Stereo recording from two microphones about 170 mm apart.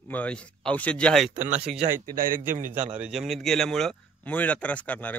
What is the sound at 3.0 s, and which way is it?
A man's voice, centre (ahead or behind).